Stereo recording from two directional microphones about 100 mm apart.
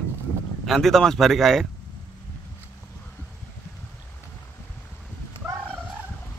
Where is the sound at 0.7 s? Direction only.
Centre (ahead or behind).